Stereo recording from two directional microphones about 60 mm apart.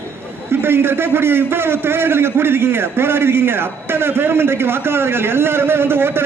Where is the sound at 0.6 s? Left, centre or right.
Right.